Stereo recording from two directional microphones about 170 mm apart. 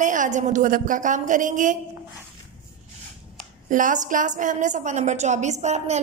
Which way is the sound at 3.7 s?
50° right (ahead or behind).